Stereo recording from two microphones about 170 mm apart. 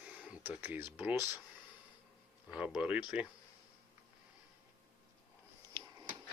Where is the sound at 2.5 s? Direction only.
5° right (ahead or behind).